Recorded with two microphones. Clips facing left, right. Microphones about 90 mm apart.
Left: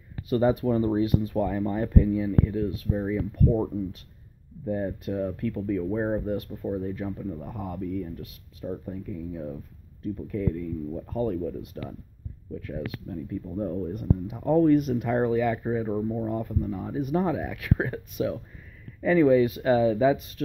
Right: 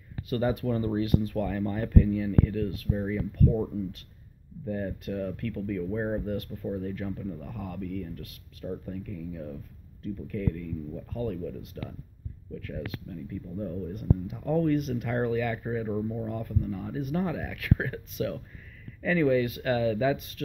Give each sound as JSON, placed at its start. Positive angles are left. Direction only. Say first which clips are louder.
{"t": 0.3, "sound": "speech", "louder": "left 5 dB", "side_deg": 30}
{"t": 3.3, "sound": "speech", "louder": "left 1 dB", "side_deg": 30}